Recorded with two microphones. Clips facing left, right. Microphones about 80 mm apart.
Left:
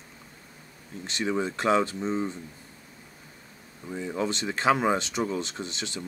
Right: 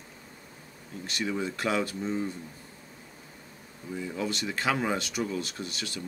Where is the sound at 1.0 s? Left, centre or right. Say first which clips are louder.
Left 3 dB; left.